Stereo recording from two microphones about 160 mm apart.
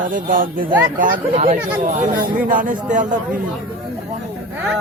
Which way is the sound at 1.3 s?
40° right (ahead or behind).